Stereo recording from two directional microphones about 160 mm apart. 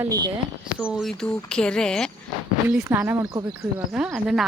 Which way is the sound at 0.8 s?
5° right (ahead or behind).